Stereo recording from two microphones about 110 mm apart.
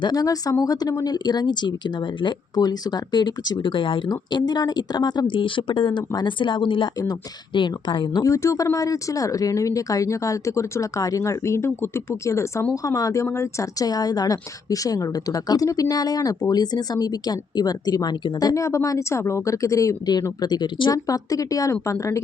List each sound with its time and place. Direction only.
0.0 s speech: 35° left (ahead or behind)
8.2 s speech: 30° left (ahead or behind)
20.9 s speech: 30° left (ahead or behind)